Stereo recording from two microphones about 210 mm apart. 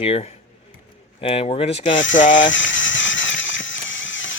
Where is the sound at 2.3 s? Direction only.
60° left (ahead or behind).